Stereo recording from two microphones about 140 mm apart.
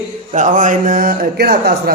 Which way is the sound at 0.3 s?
65° right (ahead or behind).